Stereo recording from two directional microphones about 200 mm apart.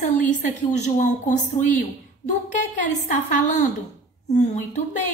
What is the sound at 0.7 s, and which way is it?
A woman's voice, 35° left (ahead or behind).